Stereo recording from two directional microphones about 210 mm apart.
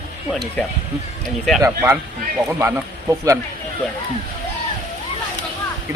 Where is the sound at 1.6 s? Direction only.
15° right (ahead or behind).